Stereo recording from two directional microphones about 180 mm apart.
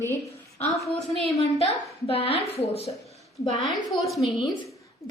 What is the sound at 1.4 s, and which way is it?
A woman's voice, 35° left (ahead or behind).